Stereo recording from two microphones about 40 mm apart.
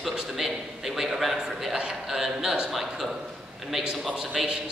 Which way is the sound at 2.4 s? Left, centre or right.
Right.